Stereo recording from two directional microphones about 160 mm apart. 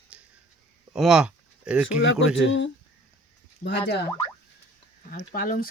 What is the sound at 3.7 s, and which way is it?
Speech, 90° left.